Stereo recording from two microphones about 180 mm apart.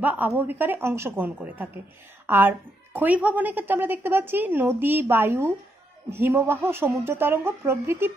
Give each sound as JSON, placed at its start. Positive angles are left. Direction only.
{"t": 0.0, "sound": "a woman's voice", "side_deg": -10}